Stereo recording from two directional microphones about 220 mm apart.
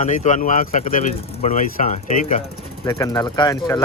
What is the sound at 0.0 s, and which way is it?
Speech, 35° left (ahead or behind).